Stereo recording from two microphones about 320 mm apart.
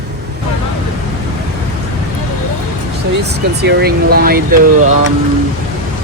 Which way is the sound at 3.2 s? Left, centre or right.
Right.